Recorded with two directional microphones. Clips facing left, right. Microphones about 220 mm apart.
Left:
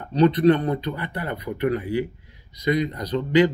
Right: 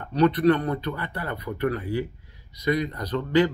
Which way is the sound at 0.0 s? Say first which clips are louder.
Left 3 dB; 20° left (ahead or behind).